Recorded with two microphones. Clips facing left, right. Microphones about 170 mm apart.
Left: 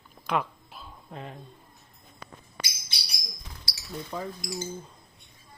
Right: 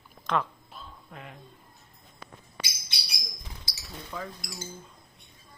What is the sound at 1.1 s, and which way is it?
Speech, 35° left (ahead or behind).